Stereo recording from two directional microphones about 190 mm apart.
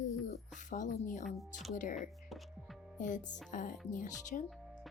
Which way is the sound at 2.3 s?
Centre (ahead or behind).